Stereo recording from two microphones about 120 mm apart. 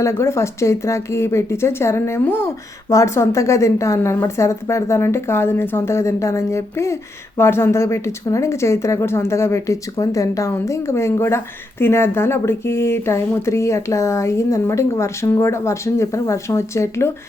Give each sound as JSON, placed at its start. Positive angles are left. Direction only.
{"t": 0.0, "sound": "a woman's voice", "side_deg": 25}